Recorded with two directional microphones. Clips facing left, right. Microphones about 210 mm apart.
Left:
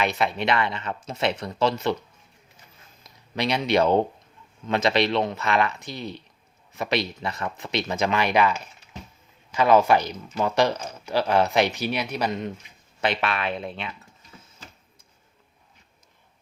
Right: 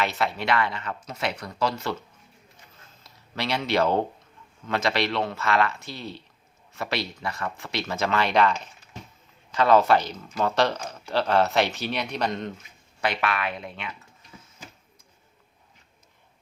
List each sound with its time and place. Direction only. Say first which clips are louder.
0.0 s speech: left 2 dB; 15° left (ahead or behind)
13.0 s speech: left 1 dB; 25° left (ahead or behind)